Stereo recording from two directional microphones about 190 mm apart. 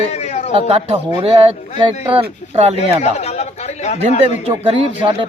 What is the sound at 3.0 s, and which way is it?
Speech, 35° left (ahead or behind).